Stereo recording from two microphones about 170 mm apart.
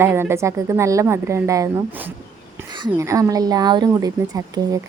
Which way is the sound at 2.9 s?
20° right (ahead or behind).